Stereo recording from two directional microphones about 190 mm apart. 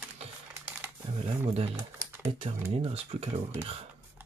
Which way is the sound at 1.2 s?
30° right (ahead or behind).